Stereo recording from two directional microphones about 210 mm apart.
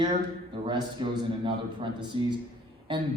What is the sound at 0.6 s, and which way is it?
A man's voice, 20° right (ahead or behind).